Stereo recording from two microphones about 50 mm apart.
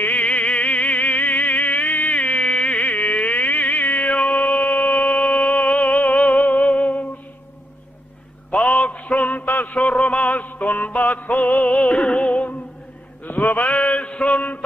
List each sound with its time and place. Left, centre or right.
0.0 s music: left
8.5 s mantra: left
9.8 s music: left
13.2 s mantra: left